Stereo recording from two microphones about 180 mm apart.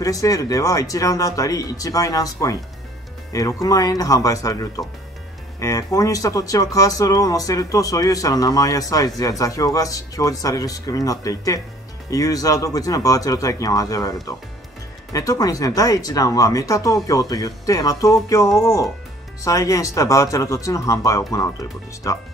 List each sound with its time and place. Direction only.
0.0 s speech: 20° left (ahead or behind)
3.6 s speech: 20° left (ahead or behind)
15.1 s speech: 20° left (ahead or behind)